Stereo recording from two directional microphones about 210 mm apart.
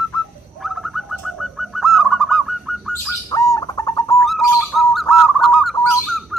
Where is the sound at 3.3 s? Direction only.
15° left (ahead or behind).